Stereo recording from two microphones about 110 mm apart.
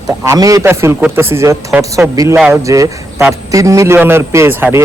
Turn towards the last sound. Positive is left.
turn(degrees=-20)  # may be behind; listen again after turning